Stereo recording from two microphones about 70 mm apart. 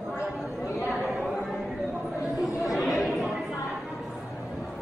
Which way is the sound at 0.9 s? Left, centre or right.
Centre.